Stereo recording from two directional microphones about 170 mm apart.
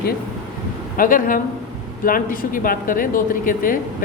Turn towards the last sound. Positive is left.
turn(degrees=55)  # may be behind; listen again after turning